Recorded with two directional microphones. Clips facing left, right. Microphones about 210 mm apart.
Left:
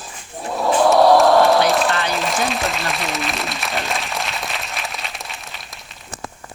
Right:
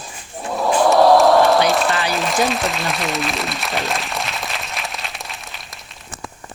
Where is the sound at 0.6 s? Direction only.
Centre (ahead or behind).